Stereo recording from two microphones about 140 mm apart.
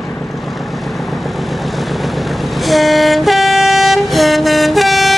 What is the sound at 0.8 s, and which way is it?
Vehicle, centre (ahead or behind).